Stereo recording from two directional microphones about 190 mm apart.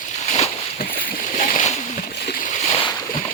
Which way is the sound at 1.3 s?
40° left (ahead or behind).